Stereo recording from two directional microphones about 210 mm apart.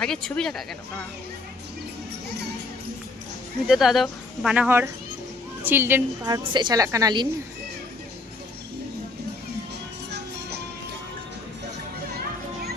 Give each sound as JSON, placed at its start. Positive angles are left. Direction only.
{"t": 0.0, "sound": "speech", "side_deg": 0}
{"t": 3.7, "sound": "a woman's voice", "side_deg": 0}